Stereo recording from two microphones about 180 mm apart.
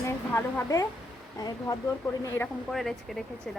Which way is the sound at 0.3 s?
15° left (ahead or behind).